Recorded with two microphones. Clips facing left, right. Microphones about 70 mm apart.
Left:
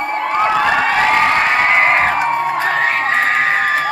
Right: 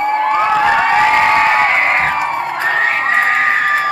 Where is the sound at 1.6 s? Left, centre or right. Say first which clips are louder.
Left 1 dB; centre.